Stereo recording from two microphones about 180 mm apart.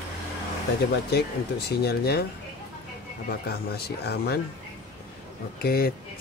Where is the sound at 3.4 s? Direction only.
60° left (ahead or behind).